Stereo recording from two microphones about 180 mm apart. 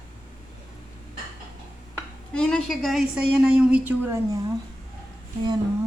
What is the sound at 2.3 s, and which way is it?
A woman's voice, 5° left (ahead or behind).